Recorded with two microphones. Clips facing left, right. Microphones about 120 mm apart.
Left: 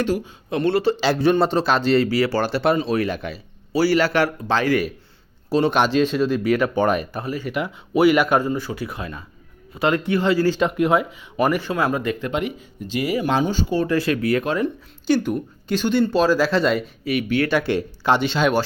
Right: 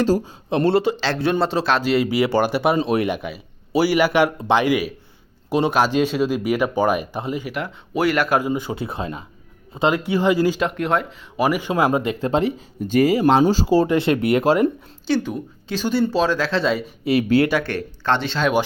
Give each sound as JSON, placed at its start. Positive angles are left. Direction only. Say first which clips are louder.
{"t": 0.0, "sound": "speech", "louder": "right 4 dB", "side_deg": -35}
{"t": 0.9, "sound": "speech", "louder": "left 3 dB", "side_deg": 10}
{"t": 2.0, "sound": "speech", "louder": "right 2 dB", "side_deg": -20}
{"t": 7.4, "sound": "speech", "louder": "left 2 dB", "side_deg": 0}
{"t": 8.4, "sound": "speech", "louder": "even", "side_deg": -15}
{"t": 9.9, "sound": "speech", "louder": "even", "side_deg": -10}
{"t": 10.6, "sound": "speech", "louder": "left 3 dB", "side_deg": 0}
{"t": 11.7, "sound": "speech", "louder": "right 3 dB", "side_deg": -25}
{"t": 15.0, "sound": "speech", "louder": "left 2 dB", "side_deg": 0}
{"t": 17.0, "sound": "speech", "louder": "right 9 dB", "side_deg": -35}
{"t": 17.6, "sound": "speech", "louder": "left 4 dB", "side_deg": 10}